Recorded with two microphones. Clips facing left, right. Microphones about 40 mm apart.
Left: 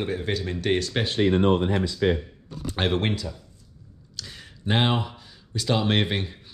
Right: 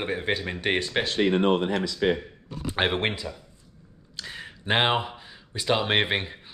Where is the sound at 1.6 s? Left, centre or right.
Right.